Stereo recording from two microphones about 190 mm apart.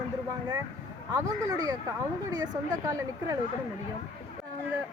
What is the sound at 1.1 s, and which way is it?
A woman's voice, 20° right (ahead or behind).